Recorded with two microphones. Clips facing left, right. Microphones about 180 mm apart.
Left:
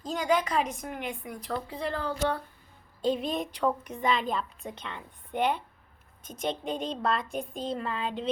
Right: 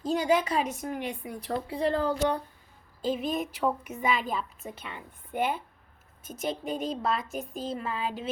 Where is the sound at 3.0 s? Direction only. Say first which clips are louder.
Left 1 dB; centre (ahead or behind).